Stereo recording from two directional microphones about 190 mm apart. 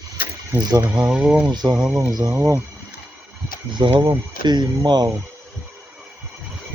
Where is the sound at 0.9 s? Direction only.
5° right (ahead or behind).